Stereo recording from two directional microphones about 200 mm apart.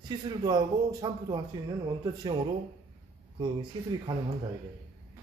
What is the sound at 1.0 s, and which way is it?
Speech, 25° right (ahead or behind).